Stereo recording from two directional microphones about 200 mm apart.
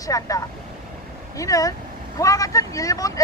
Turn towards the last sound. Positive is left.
turn(degrees=15)  # may be behind; listen again after turning